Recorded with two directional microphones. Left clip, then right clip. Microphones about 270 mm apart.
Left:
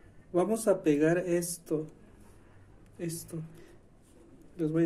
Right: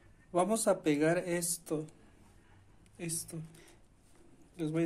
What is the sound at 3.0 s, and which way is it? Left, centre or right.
Speech, right.